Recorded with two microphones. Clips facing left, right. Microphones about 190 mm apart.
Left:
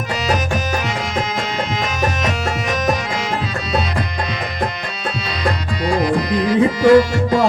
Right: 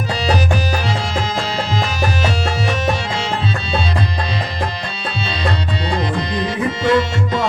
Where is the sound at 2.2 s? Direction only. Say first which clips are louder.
Right 1 dB; 30° right (ahead or behind).